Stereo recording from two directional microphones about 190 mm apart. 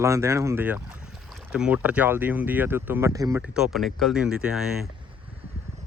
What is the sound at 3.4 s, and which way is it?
Speech, 5° right (ahead or behind).